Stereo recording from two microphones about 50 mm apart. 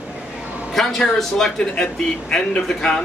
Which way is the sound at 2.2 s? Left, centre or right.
Centre.